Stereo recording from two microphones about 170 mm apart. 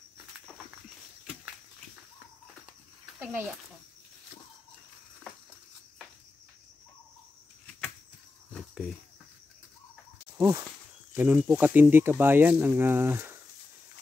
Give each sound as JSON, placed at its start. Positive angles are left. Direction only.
{"t": 3.2, "sound": "a child's voice", "side_deg": -10}
{"t": 8.5, "sound": "a sound", "side_deg": 5}
{"t": 10.3, "sound": "speech", "side_deg": -15}